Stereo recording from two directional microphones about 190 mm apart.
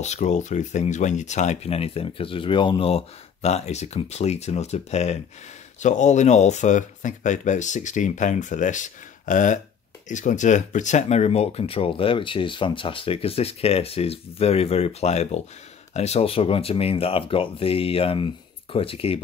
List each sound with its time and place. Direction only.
0.0 s speech: 35° left (ahead or behind)